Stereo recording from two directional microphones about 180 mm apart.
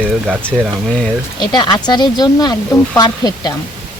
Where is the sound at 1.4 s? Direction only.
25° left (ahead or behind).